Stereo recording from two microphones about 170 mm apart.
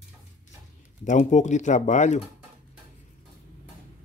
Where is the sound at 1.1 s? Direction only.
45° left (ahead or behind).